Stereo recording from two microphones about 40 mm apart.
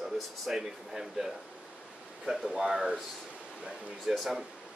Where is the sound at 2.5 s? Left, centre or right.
Centre.